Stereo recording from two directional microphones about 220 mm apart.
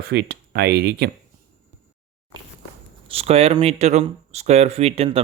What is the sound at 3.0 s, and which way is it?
Speech, 25° right (ahead or behind).